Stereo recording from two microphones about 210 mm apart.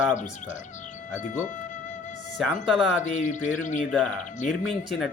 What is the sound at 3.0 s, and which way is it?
Speech, 35° left (ahead or behind).